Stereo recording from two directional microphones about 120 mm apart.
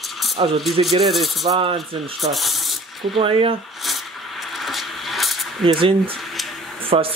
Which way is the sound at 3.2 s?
50° right (ahead or behind).